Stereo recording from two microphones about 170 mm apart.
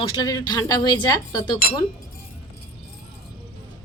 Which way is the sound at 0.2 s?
25° left (ahead or behind).